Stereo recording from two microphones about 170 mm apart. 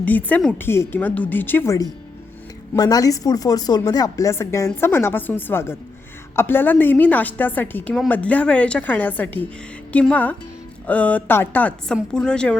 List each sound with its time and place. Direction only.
0.0 s a woman's voice: 10° left (ahead or behind)